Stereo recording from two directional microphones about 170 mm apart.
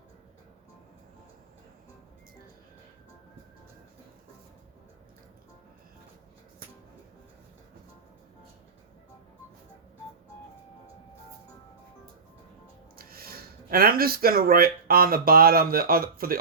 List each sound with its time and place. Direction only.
13.0 s speech: 60° right (ahead or behind)